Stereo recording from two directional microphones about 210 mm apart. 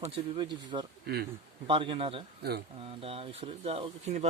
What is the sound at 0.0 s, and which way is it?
Speech, 20° right (ahead or behind).